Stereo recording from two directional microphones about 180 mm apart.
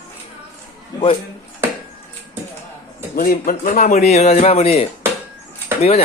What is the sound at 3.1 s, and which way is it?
Speech, 55° left (ahead or behind).